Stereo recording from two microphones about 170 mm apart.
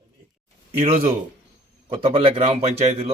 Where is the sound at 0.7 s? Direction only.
35° right (ahead or behind).